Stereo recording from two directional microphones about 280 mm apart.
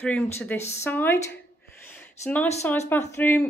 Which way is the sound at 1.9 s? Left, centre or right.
Centre.